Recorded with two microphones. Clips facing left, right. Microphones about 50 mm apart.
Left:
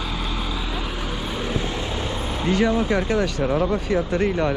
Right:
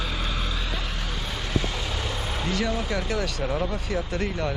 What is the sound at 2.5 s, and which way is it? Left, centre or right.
Speech, left.